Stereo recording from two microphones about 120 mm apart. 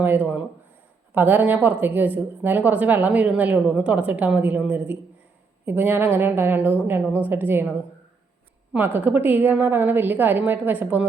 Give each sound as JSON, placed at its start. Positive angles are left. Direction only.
{"t": 0.0, "sound": "a woman's voice", "side_deg": -15}
{"t": 9.0, "sound": "a woman's voice", "side_deg": -15}